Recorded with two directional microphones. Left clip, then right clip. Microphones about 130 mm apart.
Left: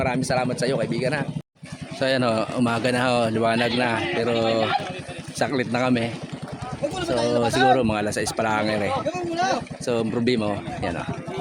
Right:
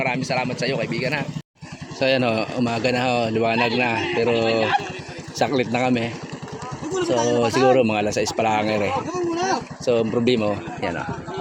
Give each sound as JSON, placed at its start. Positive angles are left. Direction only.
{"t": 0.0, "sound": "speech", "side_deg": 20}
{"t": 2.0, "sound": "speech", "side_deg": 5}
{"t": 2.6, "sound": "speech", "side_deg": 15}
{"t": 7.0, "sound": "speech", "side_deg": 30}
{"t": 7.3, "sound": "speech", "side_deg": 5}
{"t": 9.3, "sound": "speech", "side_deg": 20}
{"t": 9.8, "sound": "speech", "side_deg": 10}